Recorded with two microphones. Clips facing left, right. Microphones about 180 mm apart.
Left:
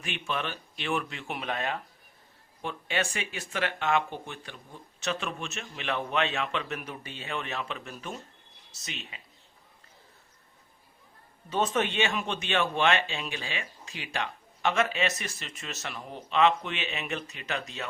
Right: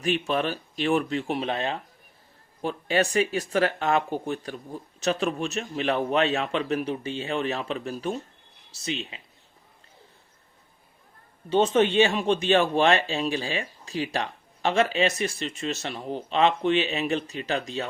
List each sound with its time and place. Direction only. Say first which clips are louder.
0.0 s speech: right 9 dB; 35° right (ahead or behind)
11.4 s speech: right 7 dB; 30° right (ahead or behind)